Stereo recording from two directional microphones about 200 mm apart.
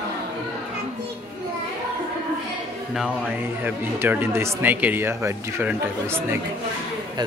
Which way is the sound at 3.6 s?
10° right (ahead or behind).